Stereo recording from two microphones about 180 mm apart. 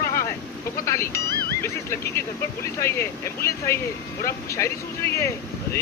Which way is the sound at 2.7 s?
15° left (ahead or behind).